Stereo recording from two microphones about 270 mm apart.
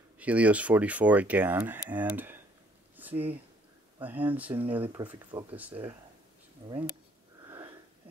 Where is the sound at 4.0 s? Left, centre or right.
Centre.